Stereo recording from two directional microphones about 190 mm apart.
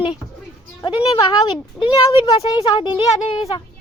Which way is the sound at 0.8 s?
25° left (ahead or behind).